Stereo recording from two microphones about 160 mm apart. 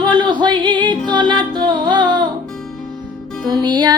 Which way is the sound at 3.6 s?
25° right (ahead or behind).